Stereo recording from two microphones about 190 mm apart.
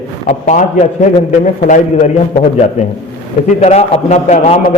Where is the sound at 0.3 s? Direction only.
40° left (ahead or behind).